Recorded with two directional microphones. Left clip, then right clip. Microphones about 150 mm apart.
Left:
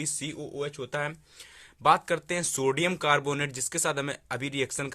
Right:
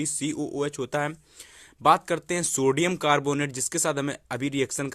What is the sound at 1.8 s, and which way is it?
Speech, 35° right (ahead or behind).